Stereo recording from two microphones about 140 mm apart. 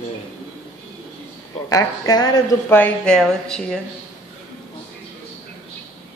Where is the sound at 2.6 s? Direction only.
15° left (ahead or behind).